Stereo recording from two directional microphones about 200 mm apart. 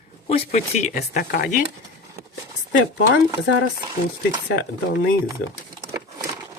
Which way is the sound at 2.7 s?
60° left (ahead or behind).